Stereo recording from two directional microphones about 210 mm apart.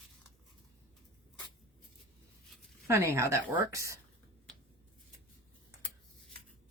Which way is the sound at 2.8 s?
15° right (ahead or behind).